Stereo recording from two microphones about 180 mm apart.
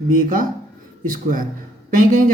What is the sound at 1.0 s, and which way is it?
Speech, 50° right (ahead or behind).